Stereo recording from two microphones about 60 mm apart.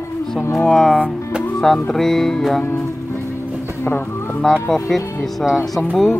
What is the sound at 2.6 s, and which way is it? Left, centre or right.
Speech, left.